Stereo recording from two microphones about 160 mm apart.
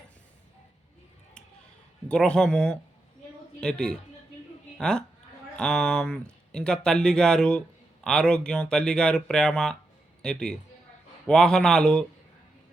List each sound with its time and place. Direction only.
2.0 s speech: 5° left (ahead or behind)